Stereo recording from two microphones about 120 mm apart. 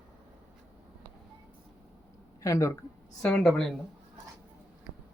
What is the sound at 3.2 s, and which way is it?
Speech, 5° left (ahead or behind).